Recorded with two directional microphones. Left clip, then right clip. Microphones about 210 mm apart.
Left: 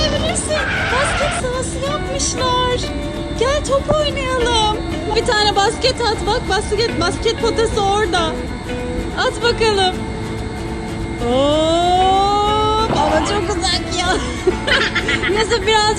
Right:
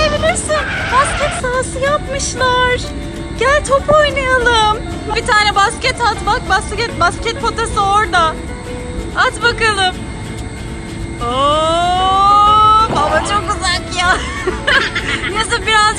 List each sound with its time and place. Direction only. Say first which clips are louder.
0.1 s a sound: right 4 dB; centre (ahead or behind)
1.8 s music: right 4 dB; 15° left (ahead or behind)
5.1 s speech: right 3 dB; 10° left (ahead or behind)
11.3 s vehicle: right 2 dB; 5° left (ahead or behind)
14.7 s speech: right 4 dB; centre (ahead or behind)